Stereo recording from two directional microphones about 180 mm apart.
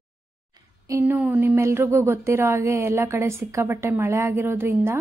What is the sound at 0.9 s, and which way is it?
A woman's voice, 15° right (ahead or behind).